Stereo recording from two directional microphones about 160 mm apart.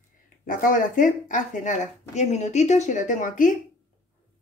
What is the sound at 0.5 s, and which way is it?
Speech, 55° left (ahead or behind).